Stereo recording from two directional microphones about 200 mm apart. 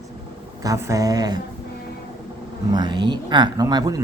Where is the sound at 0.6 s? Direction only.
15° right (ahead or behind).